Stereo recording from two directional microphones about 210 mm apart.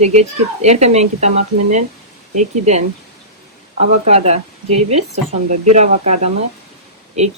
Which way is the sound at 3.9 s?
30° right (ahead or behind).